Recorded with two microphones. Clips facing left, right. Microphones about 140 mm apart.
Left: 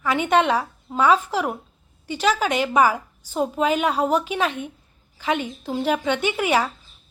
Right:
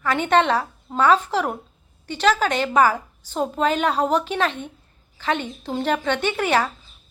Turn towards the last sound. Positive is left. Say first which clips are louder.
# even
turn(degrees=10)  # may be behind; listen again after turning